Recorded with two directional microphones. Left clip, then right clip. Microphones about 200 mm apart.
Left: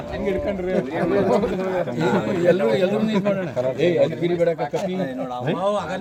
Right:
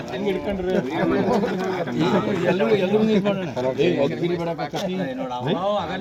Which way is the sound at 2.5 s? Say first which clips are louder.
Left 3 dB; 20° left (ahead or behind).